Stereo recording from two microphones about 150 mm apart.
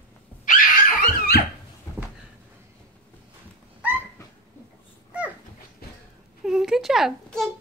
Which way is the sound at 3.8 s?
10° right (ahead or behind).